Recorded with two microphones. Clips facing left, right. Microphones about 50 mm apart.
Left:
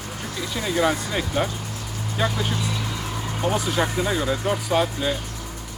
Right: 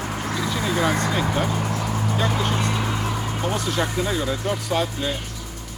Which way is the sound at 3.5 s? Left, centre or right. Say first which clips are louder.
Left 2 dB; centre.